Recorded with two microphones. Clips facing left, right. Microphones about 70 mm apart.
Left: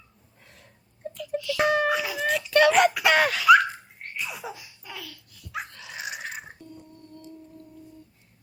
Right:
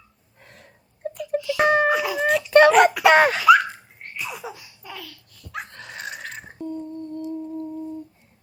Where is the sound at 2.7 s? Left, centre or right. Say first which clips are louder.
Right 5 dB; centre.